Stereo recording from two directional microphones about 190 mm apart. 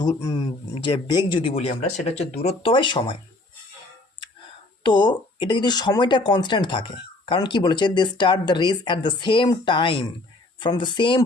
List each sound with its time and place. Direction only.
0.0 s speech: 20° left (ahead or behind)
4.8 s speech: 25° left (ahead or behind)